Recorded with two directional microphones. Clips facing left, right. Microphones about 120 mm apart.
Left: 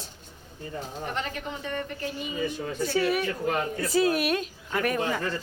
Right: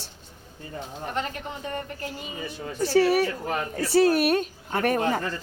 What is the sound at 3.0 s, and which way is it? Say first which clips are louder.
Speech: right 3 dB; 35° right (ahead or behind).